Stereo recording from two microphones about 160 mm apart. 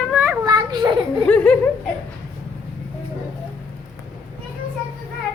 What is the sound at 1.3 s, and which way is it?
Laughter, 5° left (ahead or behind).